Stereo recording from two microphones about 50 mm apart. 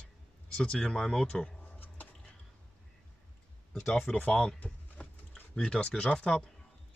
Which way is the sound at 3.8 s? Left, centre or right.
Centre.